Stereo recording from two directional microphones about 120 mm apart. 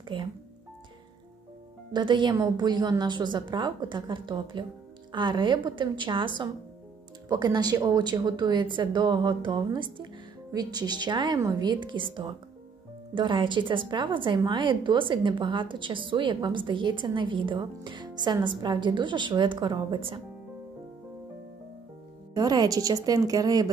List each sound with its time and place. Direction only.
0.1 s speech: 45° right (ahead or behind)
1.9 s a woman's voice: 40° right (ahead or behind)
22.3 s a woman's voice: 35° right (ahead or behind)